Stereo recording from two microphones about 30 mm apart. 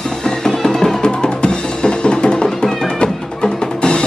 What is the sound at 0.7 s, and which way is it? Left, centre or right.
Music, centre.